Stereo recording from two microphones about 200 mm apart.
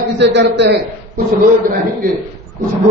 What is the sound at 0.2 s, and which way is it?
Speech, 60° right (ahead or behind).